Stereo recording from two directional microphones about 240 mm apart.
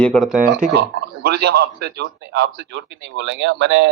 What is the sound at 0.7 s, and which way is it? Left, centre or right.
A man's voice, right.